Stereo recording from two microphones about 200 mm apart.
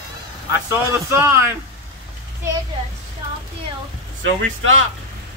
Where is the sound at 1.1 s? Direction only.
10° right (ahead or behind).